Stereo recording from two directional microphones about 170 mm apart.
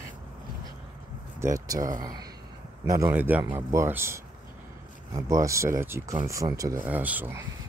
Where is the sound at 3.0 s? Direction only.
10° right (ahead or behind).